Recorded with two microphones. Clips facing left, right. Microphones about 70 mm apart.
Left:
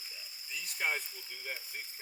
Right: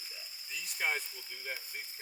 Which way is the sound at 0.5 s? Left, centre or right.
Centre.